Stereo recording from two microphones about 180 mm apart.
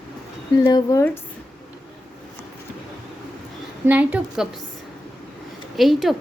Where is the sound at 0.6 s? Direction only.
20° left (ahead or behind).